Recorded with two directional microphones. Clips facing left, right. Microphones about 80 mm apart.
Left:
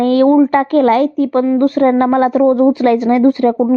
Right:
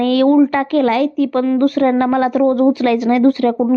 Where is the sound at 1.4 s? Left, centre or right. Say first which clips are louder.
Left 2 dB; left.